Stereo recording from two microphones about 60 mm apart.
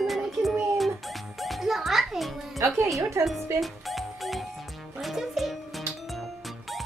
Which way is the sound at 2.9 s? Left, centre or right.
Right.